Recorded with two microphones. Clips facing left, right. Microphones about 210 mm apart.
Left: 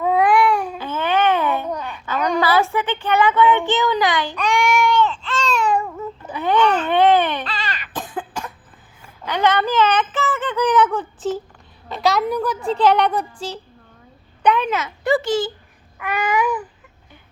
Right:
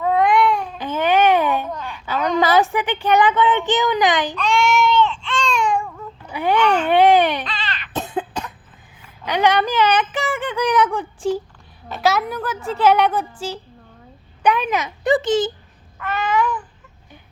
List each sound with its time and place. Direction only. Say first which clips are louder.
0.0 s cat: even; 5° left (ahead or behind)
0.8 s a sound: right 3 dB; 15° right (ahead or behind)
2.4 s speech: right 3 dB; 20° right (ahead or behind)
4.4 s baby cry: right 1 dB; 15° left (ahead or behind)
6.3 s baby cry: even; 10° right (ahead or behind)
7.4 s baby cry: left 1 dB; 10° left (ahead or behind)
7.9 s cough: right 6 dB; 25° right (ahead or behind)
9.2 s a woman's voice: right 1 dB; 15° right (ahead or behind)
16.0 s babbling: even; 15° left (ahead or behind)